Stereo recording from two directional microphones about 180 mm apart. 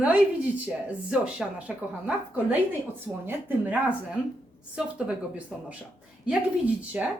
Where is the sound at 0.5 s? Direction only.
10° right (ahead or behind).